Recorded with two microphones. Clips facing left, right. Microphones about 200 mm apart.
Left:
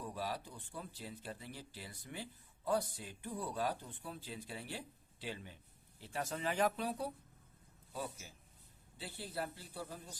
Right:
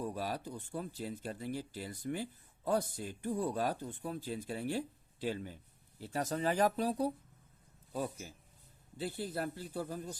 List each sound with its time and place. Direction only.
0.0 s speech: 45° right (ahead or behind)
9.0 s speech: 45° right (ahead or behind)